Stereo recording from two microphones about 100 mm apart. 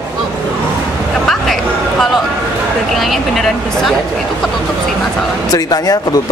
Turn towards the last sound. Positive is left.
turn(degrees=40)  # may be behind; listen again after turning